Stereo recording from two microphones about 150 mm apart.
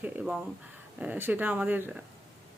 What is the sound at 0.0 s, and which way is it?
Speech, 10° right (ahead or behind).